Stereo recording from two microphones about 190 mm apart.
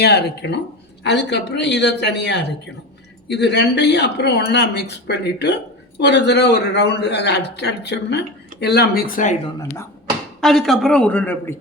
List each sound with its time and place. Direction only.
0.0 s speech: 60° left (ahead or behind)
10.4 s speech: centre (ahead or behind)